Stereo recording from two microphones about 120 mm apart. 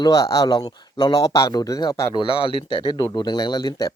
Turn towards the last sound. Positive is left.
turn(degrees=35)  # may be behind; listen again after turning